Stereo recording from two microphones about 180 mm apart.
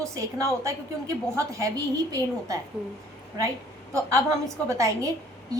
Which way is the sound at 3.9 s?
15° right (ahead or behind).